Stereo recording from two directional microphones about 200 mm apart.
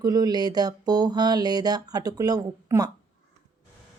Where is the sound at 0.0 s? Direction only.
20° right (ahead or behind).